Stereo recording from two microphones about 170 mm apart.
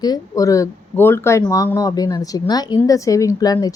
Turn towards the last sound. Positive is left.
turn(degrees=20)  # may be behind; listen again after turning